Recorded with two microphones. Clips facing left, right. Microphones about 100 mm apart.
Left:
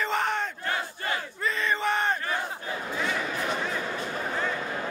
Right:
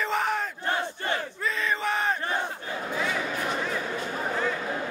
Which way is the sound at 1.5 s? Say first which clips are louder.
Left 1 dB; centre (ahead or behind).